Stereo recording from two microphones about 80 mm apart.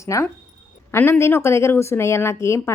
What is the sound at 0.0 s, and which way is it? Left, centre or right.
Speech, left.